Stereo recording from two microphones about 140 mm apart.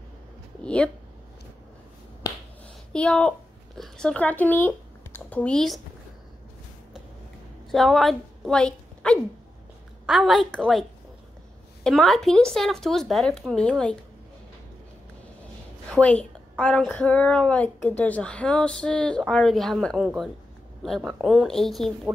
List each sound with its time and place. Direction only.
2.2 s finger snapping: 25° left (ahead or behind)
2.9 s a woman's voice: 5° left (ahead or behind)
7.7 s a woman's voice: centre (ahead or behind)
15.9 s a woman's voice: 10° left (ahead or behind)